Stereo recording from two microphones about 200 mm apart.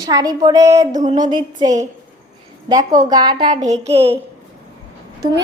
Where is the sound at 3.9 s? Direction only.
30° right (ahead or behind).